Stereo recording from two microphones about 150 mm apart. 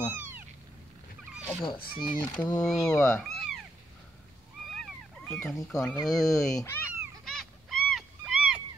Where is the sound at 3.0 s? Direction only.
5° left (ahead or behind).